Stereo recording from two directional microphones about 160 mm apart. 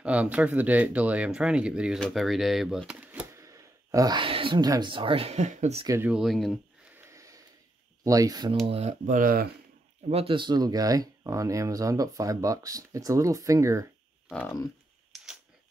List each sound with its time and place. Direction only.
0.0 s speech: 10° right (ahead or behind); by 5.9 s 45° right (ahead or behind)
5.9 s speech: 15° right (ahead or behind)
6.1 s speech: centre (ahead or behind)
7.0 s a sound: 20° right (ahead or behind)
8.0 s speech: 20° right (ahead or behind)
8.6 s speech: 40° right (ahead or behind); by 9.5 s 65° right (ahead or behind)
10.0 s speech: 35° right (ahead or behind); by 13.8 s 20° right (ahead or behind)
15.1 s a sound: centre (ahead or behind)